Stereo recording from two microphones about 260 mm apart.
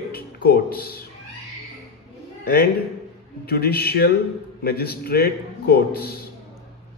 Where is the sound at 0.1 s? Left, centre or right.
Left.